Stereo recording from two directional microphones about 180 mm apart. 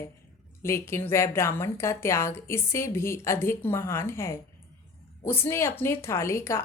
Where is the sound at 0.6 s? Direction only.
15° left (ahead or behind).